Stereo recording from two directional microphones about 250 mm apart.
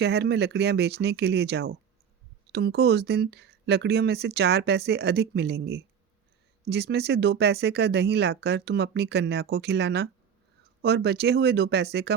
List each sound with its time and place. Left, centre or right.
0.0 s speech: right